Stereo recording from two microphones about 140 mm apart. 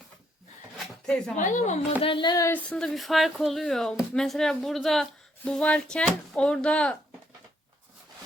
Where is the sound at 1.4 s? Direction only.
65° left (ahead or behind).